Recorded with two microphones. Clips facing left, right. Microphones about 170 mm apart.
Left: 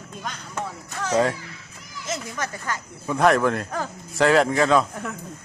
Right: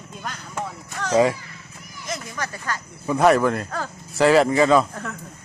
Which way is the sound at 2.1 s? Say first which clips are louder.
Left 1 dB; 20° left (ahead or behind).